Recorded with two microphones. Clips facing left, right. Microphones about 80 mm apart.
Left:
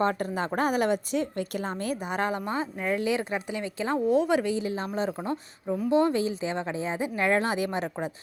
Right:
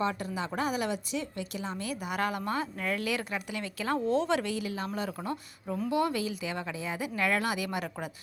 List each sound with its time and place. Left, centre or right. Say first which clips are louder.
0.0 s a woman's voice: left 5 dB; left
5.6 s speech: left 5 dB; centre
5.9 s speech: left 6 dB; left